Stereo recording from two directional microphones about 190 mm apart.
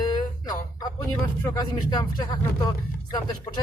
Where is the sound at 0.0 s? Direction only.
20° left (ahead or behind).